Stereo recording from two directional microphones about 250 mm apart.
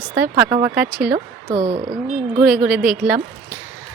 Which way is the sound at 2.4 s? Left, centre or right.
Centre.